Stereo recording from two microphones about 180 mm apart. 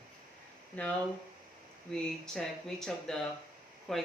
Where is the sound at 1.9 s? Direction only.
5° left (ahead or behind).